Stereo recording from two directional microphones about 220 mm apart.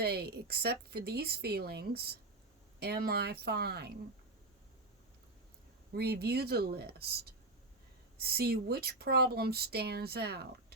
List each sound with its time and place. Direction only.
0.0 s speech: 45° right (ahead or behind)
5.9 s speech: 45° right (ahead or behind)